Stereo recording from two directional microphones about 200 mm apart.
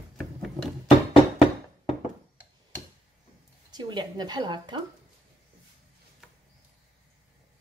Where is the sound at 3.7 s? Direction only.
20° right (ahead or behind).